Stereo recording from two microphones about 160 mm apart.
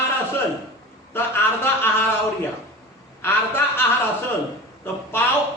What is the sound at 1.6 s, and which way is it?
Speech, 15° left (ahead or behind).